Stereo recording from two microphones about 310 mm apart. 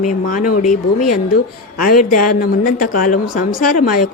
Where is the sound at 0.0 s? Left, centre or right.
Left.